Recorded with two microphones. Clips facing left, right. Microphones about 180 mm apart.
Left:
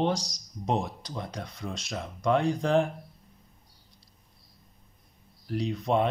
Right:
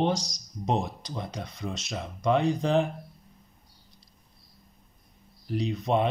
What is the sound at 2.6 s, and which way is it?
Speech, 20° right (ahead or behind).